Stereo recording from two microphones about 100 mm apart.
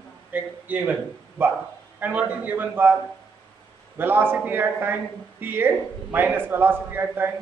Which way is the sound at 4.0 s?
20° right (ahead or behind).